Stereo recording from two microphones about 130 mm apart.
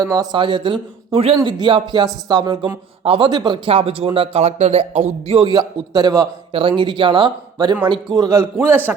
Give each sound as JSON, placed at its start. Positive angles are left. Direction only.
{"t": 0.0, "sound": "a man's voice", "side_deg": -30}
{"t": 0.3, "sound": "a man's voice", "side_deg": -40}
{"t": 5.3, "sound": "speech", "side_deg": -35}
{"t": 6.5, "sound": "speech", "side_deg": -45}
{"t": 8.1, "sound": "a man's voice", "side_deg": -25}